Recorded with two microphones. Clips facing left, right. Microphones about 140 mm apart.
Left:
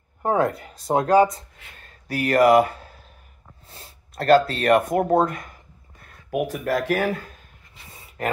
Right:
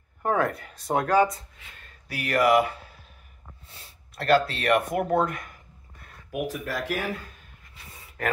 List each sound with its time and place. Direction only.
0.2 s speech: 25° left (ahead or behind)
2.0 s speech: 45° left (ahead or behind)
6.3 s speech: 50° left (ahead or behind)